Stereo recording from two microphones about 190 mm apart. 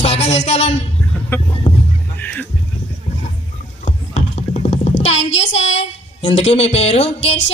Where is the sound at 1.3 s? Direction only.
10° left (ahead or behind).